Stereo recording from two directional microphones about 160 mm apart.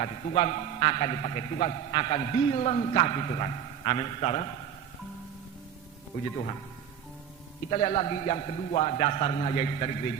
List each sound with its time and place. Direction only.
0.0 s a man's voice: 40° left (ahead or behind)
7.7 s a man's voice: 40° left (ahead or behind)